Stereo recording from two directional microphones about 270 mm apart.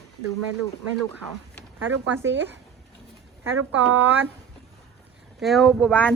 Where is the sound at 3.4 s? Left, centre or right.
Right.